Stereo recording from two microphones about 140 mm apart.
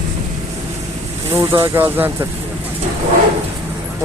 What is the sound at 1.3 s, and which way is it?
Speech, 20° right (ahead or behind).